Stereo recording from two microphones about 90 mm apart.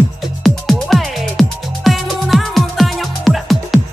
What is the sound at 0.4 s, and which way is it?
Music, centre (ahead or behind).